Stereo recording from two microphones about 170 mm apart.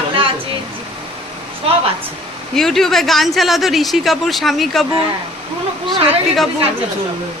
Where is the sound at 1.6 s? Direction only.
35° right (ahead or behind).